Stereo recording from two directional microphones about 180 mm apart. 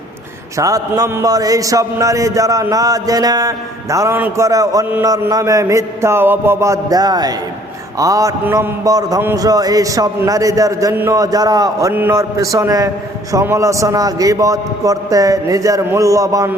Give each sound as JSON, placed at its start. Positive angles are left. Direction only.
{"t": 0.5, "sound": "a man's voice", "side_deg": -20}